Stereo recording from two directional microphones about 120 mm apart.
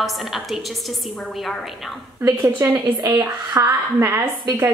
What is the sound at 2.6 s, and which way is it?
A woman's voice, 30° right (ahead or behind).